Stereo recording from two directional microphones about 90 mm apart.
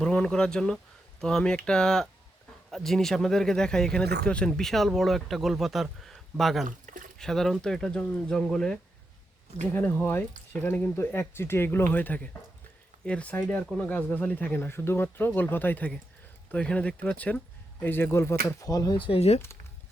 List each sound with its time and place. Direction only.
0.0 s speech: 10° left (ahead or behind)
9.7 s speech: 20° left (ahead or behind); by 18.9 s 40° left (ahead or behind)
18.9 s speech: 75° left (ahead or behind)